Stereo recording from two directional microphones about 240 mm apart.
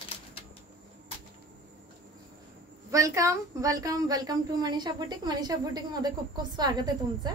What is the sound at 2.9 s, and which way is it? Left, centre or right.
A woman's voice, centre.